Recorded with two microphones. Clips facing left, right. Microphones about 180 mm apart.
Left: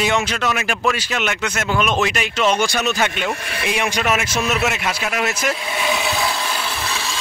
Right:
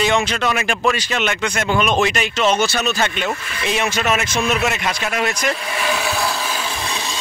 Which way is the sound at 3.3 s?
65° left (ahead or behind).